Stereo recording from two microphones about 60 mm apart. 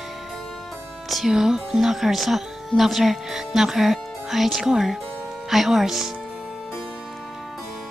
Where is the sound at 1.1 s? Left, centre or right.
Centre.